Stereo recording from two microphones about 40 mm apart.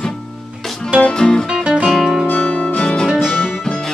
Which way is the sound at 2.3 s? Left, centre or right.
Left.